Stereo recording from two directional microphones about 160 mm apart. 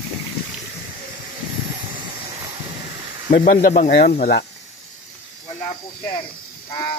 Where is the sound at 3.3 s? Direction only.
60° left (ahead or behind).